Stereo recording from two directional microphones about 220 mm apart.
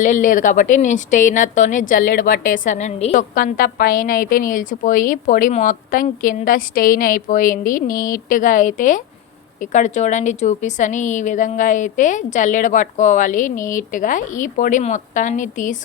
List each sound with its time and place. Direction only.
0.0 s a woman's voice: 35° left (ahead or behind)